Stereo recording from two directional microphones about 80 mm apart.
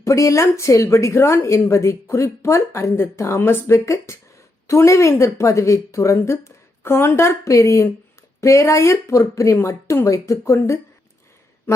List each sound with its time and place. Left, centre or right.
0.0 s a woman's voice: left